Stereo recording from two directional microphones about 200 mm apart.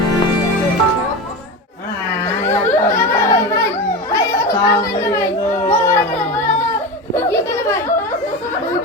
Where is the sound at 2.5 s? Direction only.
10° left (ahead or behind).